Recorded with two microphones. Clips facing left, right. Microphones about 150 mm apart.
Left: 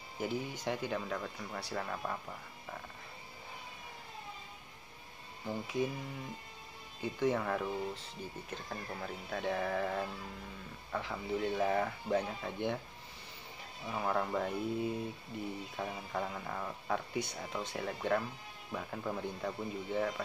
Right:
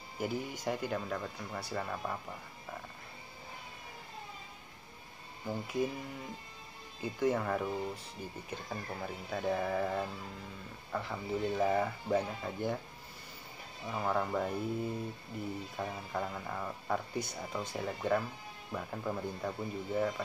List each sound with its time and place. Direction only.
0.2 s speech: 5° right (ahead or behind)
5.5 s speech: 5° right (ahead or behind)
7.0 s speech: 5° right (ahead or behind)
13.8 s speech: centre (ahead or behind)